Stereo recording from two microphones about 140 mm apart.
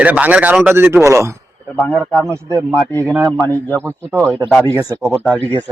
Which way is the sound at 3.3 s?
10° left (ahead or behind).